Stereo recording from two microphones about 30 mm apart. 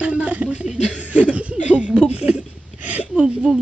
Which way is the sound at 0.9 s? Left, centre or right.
Right.